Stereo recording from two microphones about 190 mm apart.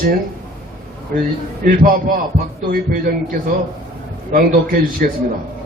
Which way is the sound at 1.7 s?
45° right (ahead or behind).